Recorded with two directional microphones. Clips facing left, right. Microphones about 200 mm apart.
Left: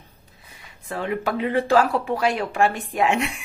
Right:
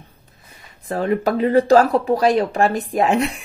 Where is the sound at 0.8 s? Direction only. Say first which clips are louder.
Right 6 dB; 40° right (ahead or behind).